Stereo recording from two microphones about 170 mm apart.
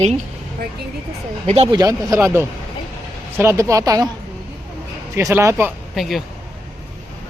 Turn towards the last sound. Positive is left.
turn(degrees=0)  # may be behind; listen again after turning